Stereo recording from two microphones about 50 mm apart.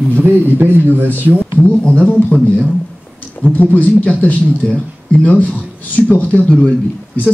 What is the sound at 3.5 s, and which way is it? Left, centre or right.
Speech, left.